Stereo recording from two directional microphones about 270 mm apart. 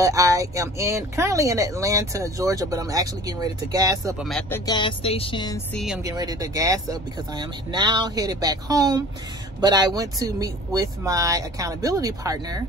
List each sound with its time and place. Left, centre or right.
0.0 s speech: centre
4.2 s speech: centre
4.6 s speech: centre
6.0 s speech: centre